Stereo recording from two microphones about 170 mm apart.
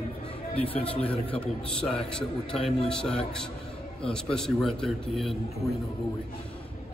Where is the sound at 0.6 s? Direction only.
35° left (ahead or behind).